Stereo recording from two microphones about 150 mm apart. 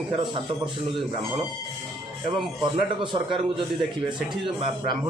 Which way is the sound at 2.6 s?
30° right (ahead or behind).